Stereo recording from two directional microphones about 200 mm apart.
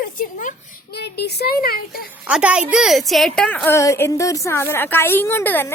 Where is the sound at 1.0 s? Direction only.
55° left (ahead or behind).